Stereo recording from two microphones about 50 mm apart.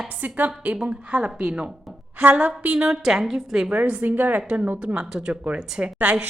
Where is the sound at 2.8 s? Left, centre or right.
Centre.